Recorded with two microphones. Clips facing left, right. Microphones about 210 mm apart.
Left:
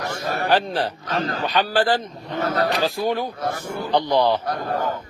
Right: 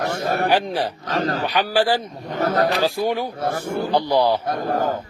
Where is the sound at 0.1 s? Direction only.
55° right (ahead or behind).